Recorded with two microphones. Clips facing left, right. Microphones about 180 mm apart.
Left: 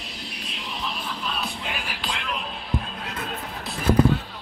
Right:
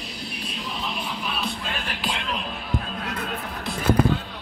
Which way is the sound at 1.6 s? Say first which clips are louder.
Right 1 dB; 10° left (ahead or behind).